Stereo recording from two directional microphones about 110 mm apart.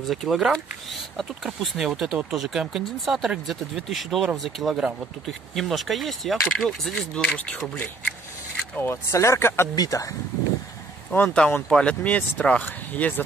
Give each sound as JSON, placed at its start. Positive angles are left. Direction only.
{"t": 0.0, "sound": "speech", "side_deg": 0}
{"t": 8.7, "sound": "speech", "side_deg": 20}
{"t": 11.1, "sound": "speech", "side_deg": 5}